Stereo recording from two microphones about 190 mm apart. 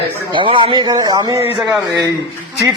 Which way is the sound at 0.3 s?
25° right (ahead or behind).